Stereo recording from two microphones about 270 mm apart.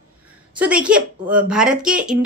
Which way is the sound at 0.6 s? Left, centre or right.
Centre.